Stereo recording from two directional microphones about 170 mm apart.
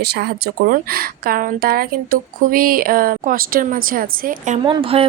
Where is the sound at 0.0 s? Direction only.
70° right (ahead or behind); by 4.6 s 50° right (ahead or behind).